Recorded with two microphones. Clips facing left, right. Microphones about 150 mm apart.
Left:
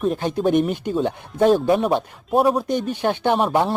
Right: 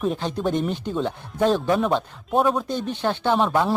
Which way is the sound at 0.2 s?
10° left (ahead or behind).